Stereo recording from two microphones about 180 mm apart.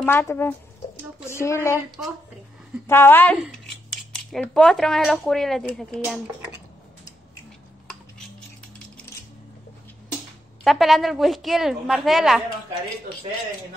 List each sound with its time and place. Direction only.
0.0 s speech: 15° left (ahead or behind)
2.9 s a woman's voice: 10° left (ahead or behind)
10.6 s speech: centre (ahead or behind)